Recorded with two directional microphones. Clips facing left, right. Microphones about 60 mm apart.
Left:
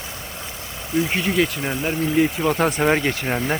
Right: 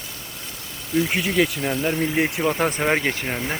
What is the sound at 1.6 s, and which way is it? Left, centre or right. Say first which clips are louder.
Speech: right 1 dB; centre.